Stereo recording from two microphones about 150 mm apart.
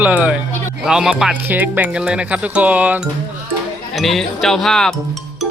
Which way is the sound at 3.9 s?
Centre (ahead or behind).